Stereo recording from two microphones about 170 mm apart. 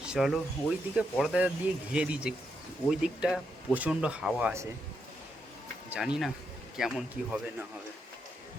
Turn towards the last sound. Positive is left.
turn(degrees=-5)  # may be behind; listen again after turning